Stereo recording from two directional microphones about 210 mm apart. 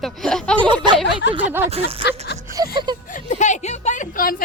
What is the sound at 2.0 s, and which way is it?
Speech, 55° left (ahead or behind).